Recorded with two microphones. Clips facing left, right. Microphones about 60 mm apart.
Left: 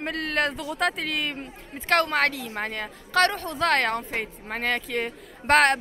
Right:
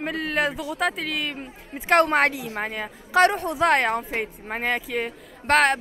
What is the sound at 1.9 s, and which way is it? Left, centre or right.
Speech, right.